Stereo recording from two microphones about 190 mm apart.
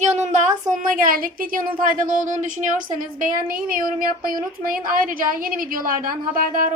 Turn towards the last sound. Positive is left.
turn(degrees=-45)  # may be behind; listen again after turning